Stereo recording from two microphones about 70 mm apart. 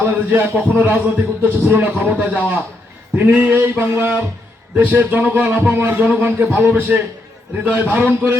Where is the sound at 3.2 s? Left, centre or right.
Right.